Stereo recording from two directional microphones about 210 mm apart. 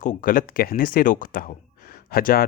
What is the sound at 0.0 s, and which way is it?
Speech, 40° left (ahead or behind).